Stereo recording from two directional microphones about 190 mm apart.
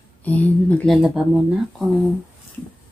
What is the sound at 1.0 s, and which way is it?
Speech, 5° right (ahead or behind).